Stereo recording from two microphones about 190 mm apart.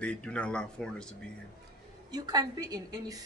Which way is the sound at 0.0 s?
5° left (ahead or behind).